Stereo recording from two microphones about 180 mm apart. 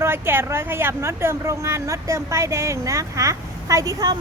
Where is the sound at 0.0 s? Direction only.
10° right (ahead or behind).